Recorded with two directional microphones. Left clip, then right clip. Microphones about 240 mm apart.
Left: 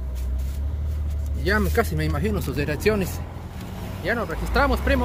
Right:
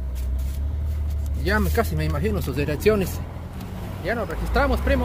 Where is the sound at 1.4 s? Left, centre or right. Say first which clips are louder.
Left 1 dB; centre.